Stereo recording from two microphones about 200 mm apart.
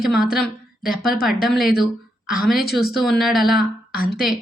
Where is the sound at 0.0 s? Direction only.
5° right (ahead or behind).